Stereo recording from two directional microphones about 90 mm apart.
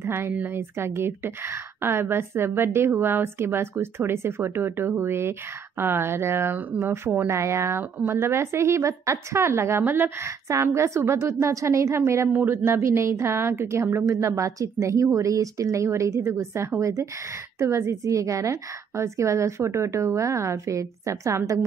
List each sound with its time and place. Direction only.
0.0 s a woman's voice: 25° right (ahead or behind)